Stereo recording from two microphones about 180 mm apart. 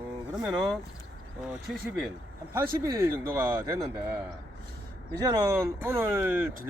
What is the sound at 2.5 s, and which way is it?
Speech, 15° right (ahead or behind).